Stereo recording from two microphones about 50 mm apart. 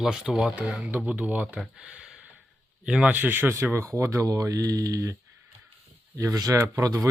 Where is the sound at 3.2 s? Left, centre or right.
Right.